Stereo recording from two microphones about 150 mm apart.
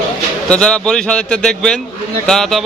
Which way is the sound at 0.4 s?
5° left (ahead or behind).